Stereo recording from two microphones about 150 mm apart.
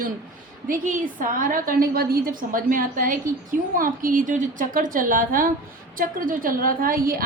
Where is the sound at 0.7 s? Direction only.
65° right (ahead or behind).